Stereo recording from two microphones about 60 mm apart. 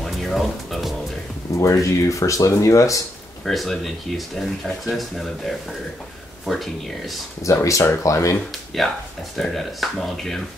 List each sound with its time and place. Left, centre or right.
0.0 s music: centre
1.6 s speech: left
3.4 s speech: centre
7.4 s speech: left
8.8 s speech: centre